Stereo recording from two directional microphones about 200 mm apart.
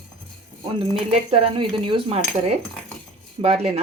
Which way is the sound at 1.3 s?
25° right (ahead or behind).